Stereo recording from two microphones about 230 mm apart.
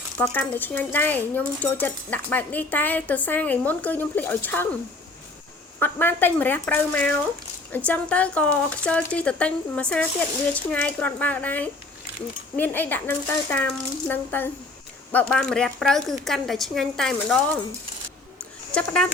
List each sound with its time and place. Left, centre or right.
0.2 s speech: centre
5.8 s a woman's voice: centre
18.7 s a woman's voice: centre